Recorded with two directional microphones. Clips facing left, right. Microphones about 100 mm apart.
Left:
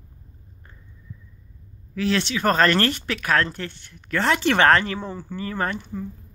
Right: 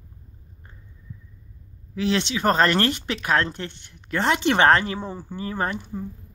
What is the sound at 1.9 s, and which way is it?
Speech, 20° right (ahead or behind).